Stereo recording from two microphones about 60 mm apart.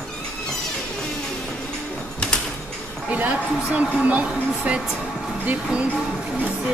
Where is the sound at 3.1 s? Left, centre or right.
Right.